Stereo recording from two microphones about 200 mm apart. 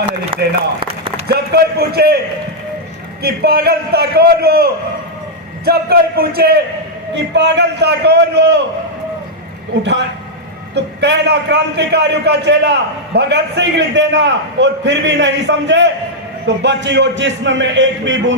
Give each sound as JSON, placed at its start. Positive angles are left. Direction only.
{"t": 0.3, "sound": "a man's voice", "side_deg": -25}
{"t": 1.3, "sound": "a man's voice", "side_deg": -50}
{"t": 3.2, "sound": "a man's voice", "side_deg": -50}
{"t": 7.1, "sound": "a man's voice", "side_deg": -60}
{"t": 9.7, "sound": "a man's voice", "side_deg": -60}